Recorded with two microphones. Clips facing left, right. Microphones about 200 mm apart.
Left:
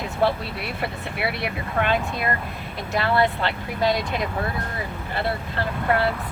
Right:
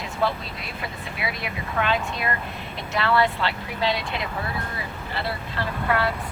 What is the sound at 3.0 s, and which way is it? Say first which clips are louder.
Speech: even; 45° left (ahead or behind).